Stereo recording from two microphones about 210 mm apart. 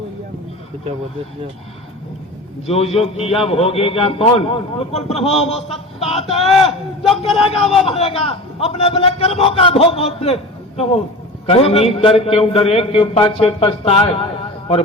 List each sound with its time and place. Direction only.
2.6 s a man's voice: 30° left (ahead or behind)